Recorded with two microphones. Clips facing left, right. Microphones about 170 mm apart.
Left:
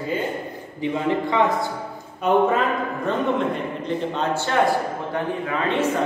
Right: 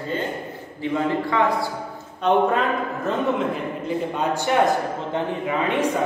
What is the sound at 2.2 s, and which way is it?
A man's voice, centre (ahead or behind).